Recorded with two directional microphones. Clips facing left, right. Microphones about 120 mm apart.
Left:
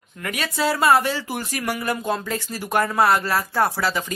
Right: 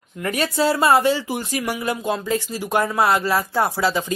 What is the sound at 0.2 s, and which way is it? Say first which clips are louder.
Speech: right 4 dB; 30° right (ahead or behind).